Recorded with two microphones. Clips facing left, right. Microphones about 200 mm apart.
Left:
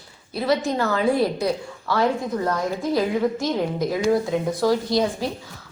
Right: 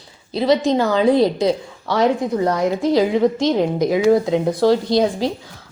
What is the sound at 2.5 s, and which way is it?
Speech, 90° right.